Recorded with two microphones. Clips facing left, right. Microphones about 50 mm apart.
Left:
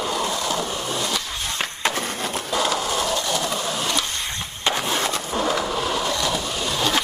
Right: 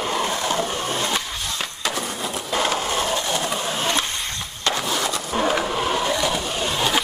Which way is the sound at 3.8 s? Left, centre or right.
Right.